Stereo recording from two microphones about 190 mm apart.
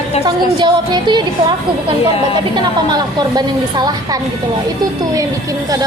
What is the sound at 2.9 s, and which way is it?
A woman's voice, 20° right (ahead or behind).